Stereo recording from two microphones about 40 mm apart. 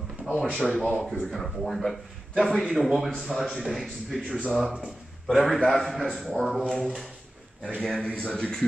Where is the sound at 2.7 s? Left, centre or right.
Centre.